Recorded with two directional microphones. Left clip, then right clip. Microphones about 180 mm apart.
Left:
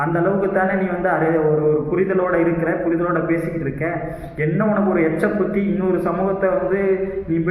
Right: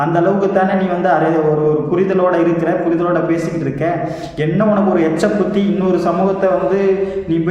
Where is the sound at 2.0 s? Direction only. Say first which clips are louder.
Right 4 dB; 15° right (ahead or behind).